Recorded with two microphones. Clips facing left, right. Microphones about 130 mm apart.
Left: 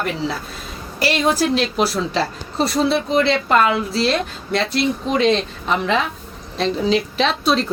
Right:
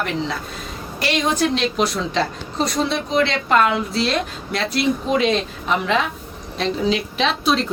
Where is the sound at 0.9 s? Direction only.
5° left (ahead or behind).